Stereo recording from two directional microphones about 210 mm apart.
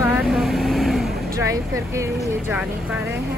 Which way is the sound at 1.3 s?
15° right (ahead or behind).